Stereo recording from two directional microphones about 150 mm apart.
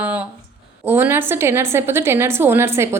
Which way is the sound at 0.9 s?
15° right (ahead or behind).